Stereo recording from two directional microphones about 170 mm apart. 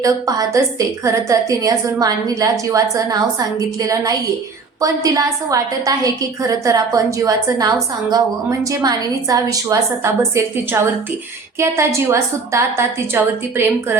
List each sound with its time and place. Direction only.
0.0 s a woman's voice: 20° right (ahead or behind)